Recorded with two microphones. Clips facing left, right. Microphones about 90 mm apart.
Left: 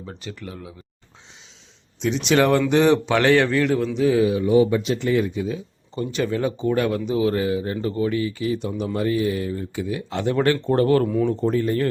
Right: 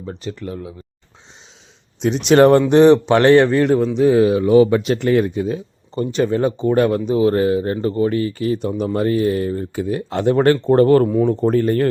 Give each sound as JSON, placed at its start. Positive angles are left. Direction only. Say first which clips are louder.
{"t": 0.1, "sound": "speech", "louder": "right 9 dB", "side_deg": -35}
{"t": 2.0, "sound": "speech", "louder": "right 7 dB", "side_deg": -45}
{"t": 4.3, "sound": "speech", "louder": "right 5 dB", "side_deg": -65}
{"t": 4.8, "sound": "speech", "louder": "right 5 dB", "side_deg": -55}
{"t": 11.1, "sound": "speech", "louder": "right 5 dB", "side_deg": -30}
{"t": 11.4, "sound": "speech", "louder": "right 5 dB", "side_deg": -50}